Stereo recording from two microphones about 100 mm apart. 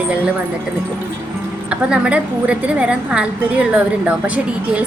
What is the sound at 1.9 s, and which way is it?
A woman's voice, 10° right (ahead or behind).